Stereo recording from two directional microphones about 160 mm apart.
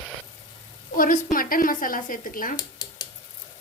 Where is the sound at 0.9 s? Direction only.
60° left (ahead or behind).